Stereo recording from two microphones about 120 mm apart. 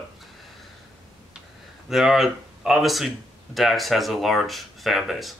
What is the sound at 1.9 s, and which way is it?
Speech, centre (ahead or behind).